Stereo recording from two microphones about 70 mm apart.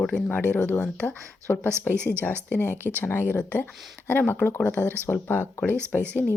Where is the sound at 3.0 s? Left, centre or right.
Left.